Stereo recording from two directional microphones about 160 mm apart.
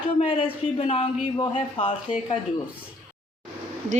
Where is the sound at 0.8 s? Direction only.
35° left (ahead or behind).